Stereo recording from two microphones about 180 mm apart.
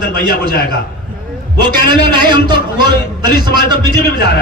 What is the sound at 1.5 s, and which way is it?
Speech, 65° left (ahead or behind).